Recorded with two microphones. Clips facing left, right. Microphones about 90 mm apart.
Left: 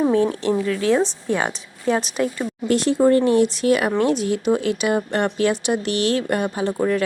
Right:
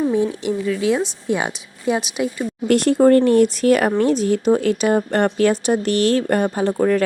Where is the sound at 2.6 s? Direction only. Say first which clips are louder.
Right 3 dB; 55° right (ahead or behind).